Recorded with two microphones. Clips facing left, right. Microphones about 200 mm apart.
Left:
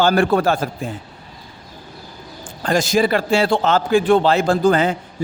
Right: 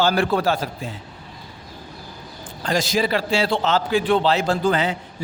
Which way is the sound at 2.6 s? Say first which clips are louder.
Left 4 dB; 50° left (ahead or behind).